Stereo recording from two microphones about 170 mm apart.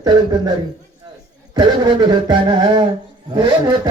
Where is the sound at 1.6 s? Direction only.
25° right (ahead or behind).